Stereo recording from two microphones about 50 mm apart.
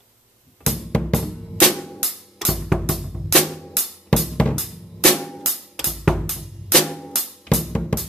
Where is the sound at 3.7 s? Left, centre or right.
Centre.